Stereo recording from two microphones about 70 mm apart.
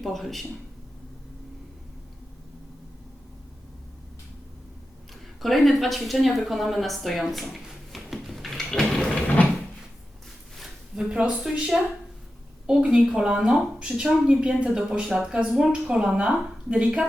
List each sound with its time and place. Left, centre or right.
0.0 s speech: centre
5.4 s speech: centre
9.1 s a sound: left
10.6 s speech: centre